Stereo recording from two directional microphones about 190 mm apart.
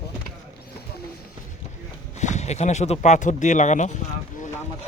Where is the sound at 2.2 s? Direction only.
35° left (ahead or behind).